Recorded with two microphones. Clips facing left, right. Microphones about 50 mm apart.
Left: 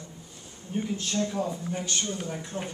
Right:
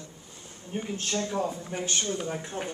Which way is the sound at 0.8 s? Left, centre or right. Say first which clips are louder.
Left 2 dB; right.